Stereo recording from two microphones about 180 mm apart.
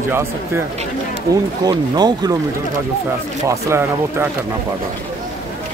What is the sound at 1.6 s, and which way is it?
Speech, 25° right (ahead or behind).